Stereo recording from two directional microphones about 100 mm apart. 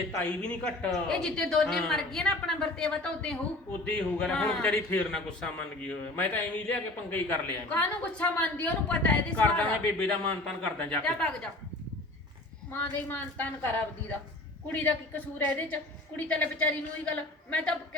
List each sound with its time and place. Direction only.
0.2 s a woman's voice: 15° left (ahead or behind)
13.1 s a woman's voice: 15° left (ahead or behind)
14.7 s a woman's voice: 15° left (ahead or behind)